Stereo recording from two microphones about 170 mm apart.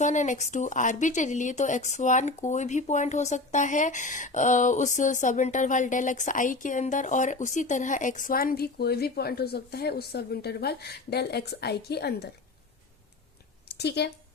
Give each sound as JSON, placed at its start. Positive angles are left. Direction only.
{"t": 0.0, "sound": "a woman's voice", "side_deg": 45}
{"t": 13.7, "sound": "speech", "side_deg": 80}